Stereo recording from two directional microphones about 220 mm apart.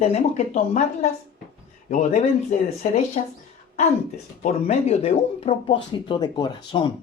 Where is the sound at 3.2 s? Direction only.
35° left (ahead or behind).